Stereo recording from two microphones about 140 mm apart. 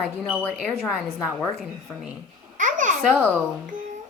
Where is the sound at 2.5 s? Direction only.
65° right (ahead or behind).